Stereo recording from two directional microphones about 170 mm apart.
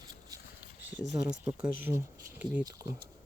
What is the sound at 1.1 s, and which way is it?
Speech, 5° right (ahead or behind).